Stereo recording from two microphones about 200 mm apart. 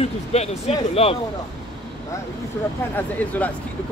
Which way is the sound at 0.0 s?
30° left (ahead or behind).